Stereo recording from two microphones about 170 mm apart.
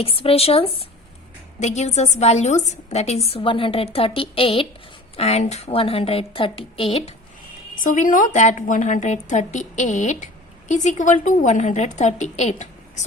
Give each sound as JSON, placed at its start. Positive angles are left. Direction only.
{"t": 0.0, "sound": "a woman's voice", "side_deg": 35}
{"t": 7.8, "sound": "a woman's voice", "side_deg": 50}